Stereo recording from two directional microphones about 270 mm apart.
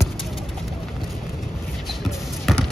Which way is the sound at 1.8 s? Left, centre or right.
Centre.